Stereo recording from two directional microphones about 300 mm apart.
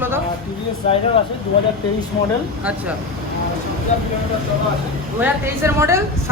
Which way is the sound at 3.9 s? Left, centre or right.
Left.